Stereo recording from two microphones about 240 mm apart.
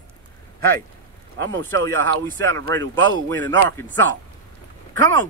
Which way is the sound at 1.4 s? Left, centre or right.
Centre.